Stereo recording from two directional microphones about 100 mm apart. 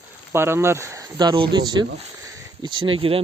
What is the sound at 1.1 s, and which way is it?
Speech, 50° right (ahead or behind).